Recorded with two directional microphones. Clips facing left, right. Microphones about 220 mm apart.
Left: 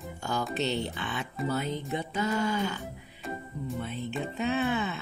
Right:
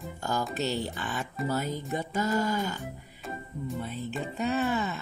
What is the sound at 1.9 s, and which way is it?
Music, 45° right (ahead or behind).